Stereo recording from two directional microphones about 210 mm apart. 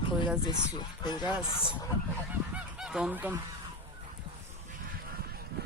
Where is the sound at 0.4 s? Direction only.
20° left (ahead or behind).